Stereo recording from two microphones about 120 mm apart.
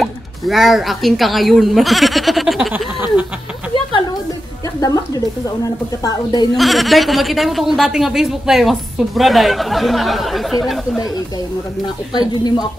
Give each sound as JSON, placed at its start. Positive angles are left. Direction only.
{"t": 0.0, "sound": "a woman's voice", "side_deg": 0}
{"t": 2.7, "sound": "a sound", "side_deg": -15}
{"t": 4.7, "sound": "speech", "side_deg": 30}
{"t": 6.5, "sound": "a woman's voice", "side_deg": 0}
{"t": 12.1, "sound": "speech", "side_deg": 35}